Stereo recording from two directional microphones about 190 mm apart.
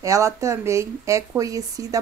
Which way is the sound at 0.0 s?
15° right (ahead or behind).